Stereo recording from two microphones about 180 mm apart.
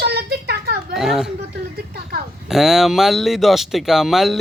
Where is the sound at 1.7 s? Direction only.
60° right (ahead or behind).